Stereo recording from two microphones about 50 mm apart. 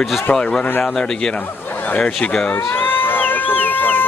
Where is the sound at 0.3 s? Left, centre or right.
Centre.